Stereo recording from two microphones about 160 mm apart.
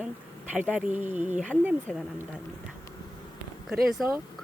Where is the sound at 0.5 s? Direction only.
5° right (ahead or behind).